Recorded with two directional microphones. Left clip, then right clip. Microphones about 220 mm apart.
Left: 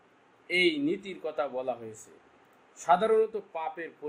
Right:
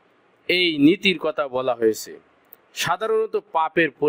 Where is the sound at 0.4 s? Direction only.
50° right (ahead or behind).